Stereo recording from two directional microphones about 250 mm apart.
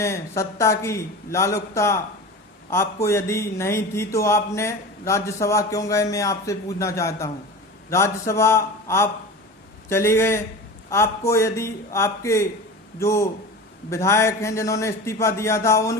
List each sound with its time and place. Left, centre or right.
0.0 s speech: centre